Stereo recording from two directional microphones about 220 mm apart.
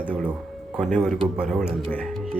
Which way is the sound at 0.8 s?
Centre (ahead or behind).